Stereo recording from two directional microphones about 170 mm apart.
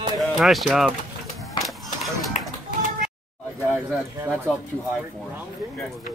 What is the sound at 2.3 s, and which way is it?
Music, 45° left (ahead or behind).